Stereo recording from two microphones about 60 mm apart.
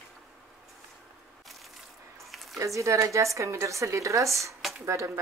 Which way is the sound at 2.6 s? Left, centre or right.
Right.